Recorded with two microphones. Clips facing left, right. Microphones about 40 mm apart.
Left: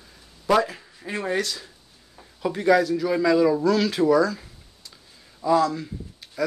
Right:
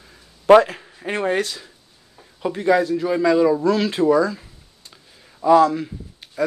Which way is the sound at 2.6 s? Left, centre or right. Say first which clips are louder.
Right 1 dB; right.